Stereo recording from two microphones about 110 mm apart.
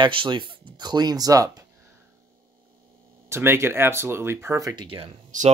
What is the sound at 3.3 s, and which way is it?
Speech, 20° right (ahead or behind).